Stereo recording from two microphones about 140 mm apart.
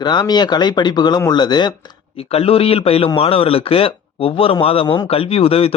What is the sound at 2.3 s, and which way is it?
A man's voice, 45° left (ahead or behind).